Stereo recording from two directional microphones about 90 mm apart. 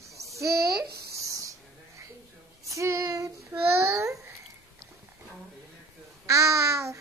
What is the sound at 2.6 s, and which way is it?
Child singing, 35° right (ahead or behind).